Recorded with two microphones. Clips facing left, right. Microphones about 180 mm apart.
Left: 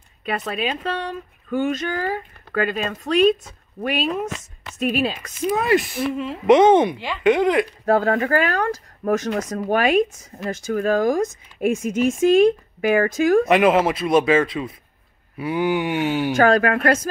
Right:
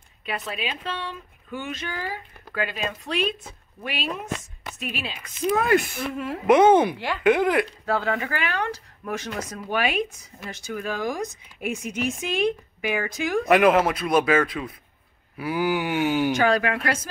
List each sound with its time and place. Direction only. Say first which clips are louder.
0.2 s speech: left 6 dB; 50° left (ahead or behind)
5.5 s speech: left 2 dB; 5° left (ahead or behind)
6.1 s speech: left 3 dB; 10° right (ahead or behind)
7.8 s speech: left 7 dB; 45° left (ahead or behind)
13.5 s speech: left 2 dB; centre (ahead or behind)
16.3 s speech: left 5 dB; 50° left (ahead or behind)